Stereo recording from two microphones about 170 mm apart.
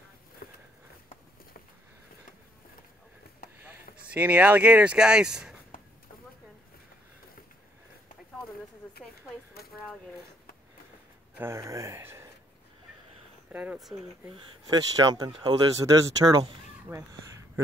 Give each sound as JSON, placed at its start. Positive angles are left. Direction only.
{"t": 0.4, "sound": "a sound", "side_deg": 60}
{"t": 3.9, "sound": "speech", "side_deg": -10}
{"t": 11.3, "sound": "speech", "side_deg": -15}
{"t": 13.5, "sound": "speech", "side_deg": -10}
{"t": 14.7, "sound": "speech", "side_deg": -25}